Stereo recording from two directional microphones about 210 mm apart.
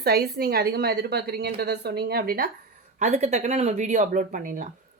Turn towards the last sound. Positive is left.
turn(degrees=-35)  # may be behind; listen again after turning